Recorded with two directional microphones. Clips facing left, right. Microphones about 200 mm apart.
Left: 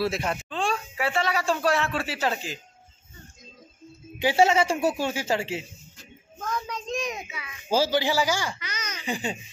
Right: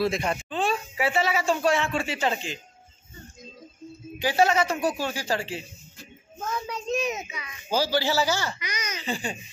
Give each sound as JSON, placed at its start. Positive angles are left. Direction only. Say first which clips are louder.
{"t": 0.0, "sound": "speech", "louder": "right 1 dB", "side_deg": 5}
{"t": 4.2, "sound": "speech", "louder": "left 2 dB", "side_deg": 25}
{"t": 6.4, "sound": "a child's voice", "louder": "right 1 dB", "side_deg": -10}
{"t": 7.7, "sound": "a man's voice", "louder": "left 1 dB", "side_deg": 25}
{"t": 8.5, "sound": "speech", "louder": "right 3 dB", "side_deg": -15}
{"t": 9.0, "sound": "speech", "louder": "left 2 dB", "side_deg": 20}